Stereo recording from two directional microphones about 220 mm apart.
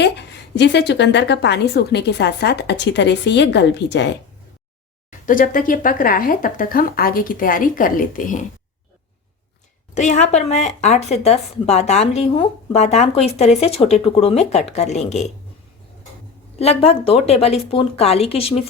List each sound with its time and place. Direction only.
0.0 s a woman's voice: 50° left (ahead or behind)
5.2 s speech: 40° left (ahead or behind)
9.9 s a woman's voice: 30° left (ahead or behind)
16.6 s a woman's voice: 25° left (ahead or behind)